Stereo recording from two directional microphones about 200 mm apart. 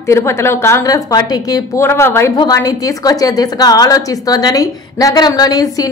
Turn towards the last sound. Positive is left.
turn(degrees=20)  # may be behind; listen again after turning